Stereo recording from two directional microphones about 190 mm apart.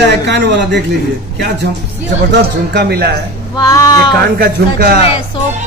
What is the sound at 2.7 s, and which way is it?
Speech, 60° right (ahead or behind).